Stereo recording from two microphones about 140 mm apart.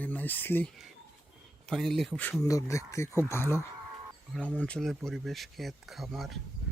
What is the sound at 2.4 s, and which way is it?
Speech, 20° left (ahead or behind).